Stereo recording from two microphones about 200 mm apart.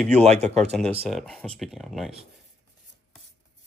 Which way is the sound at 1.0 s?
Centre (ahead or behind).